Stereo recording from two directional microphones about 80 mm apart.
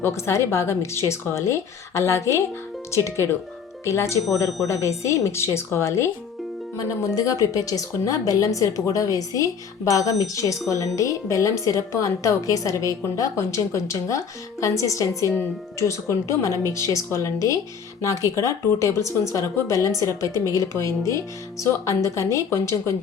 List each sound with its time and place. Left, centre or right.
0.0 s speech: left
7.2 s a woman's voice: left